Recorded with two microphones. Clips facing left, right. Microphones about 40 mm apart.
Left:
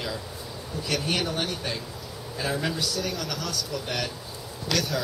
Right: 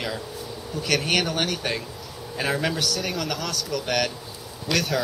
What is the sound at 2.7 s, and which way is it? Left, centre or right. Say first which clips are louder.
Speech: right 3 dB; right.